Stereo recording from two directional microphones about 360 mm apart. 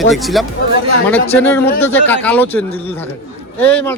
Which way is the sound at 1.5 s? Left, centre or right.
Centre.